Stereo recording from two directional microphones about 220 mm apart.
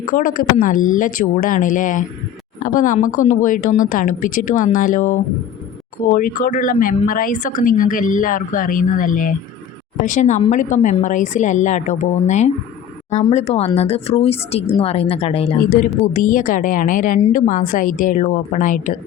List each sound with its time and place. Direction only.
0.1 s a woman's voice: 40° left (ahead or behind)
15.8 s a woman's voice: 35° left (ahead or behind)